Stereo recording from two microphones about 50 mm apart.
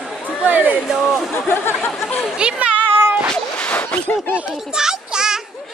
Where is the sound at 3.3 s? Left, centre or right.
Left.